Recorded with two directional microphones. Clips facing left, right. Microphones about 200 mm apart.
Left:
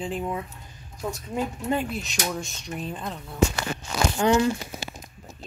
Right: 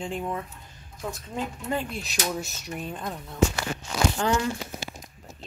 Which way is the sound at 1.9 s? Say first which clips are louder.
Left 1 dB; centre (ahead or behind).